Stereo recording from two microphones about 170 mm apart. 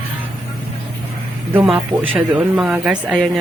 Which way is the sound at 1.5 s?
5° right (ahead or behind).